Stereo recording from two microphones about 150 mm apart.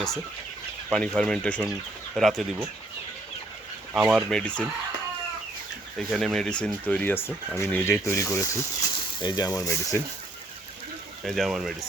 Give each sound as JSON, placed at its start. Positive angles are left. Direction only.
{"t": 0.9, "sound": "speech", "side_deg": 5}
{"t": 3.9, "sound": "speech", "side_deg": -5}
{"t": 6.0, "sound": "speech", "side_deg": 0}
{"t": 11.3, "sound": "speech", "side_deg": 0}